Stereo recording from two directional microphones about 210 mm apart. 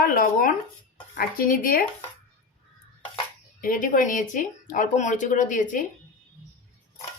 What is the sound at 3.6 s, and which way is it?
Speech, 40° left (ahead or behind).